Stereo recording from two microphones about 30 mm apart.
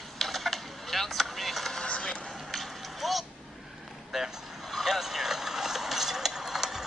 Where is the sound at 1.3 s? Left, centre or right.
Centre.